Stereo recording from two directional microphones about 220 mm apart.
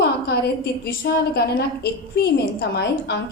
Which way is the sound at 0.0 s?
45° left (ahead or behind).